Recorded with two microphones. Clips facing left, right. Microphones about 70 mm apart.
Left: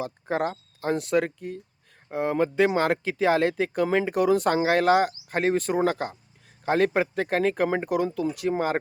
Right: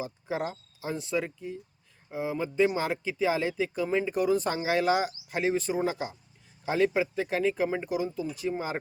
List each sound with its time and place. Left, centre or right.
0.0 s speech: left